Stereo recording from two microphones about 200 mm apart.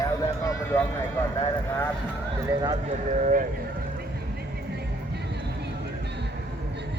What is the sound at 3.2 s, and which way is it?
Speech, 40° right (ahead or behind).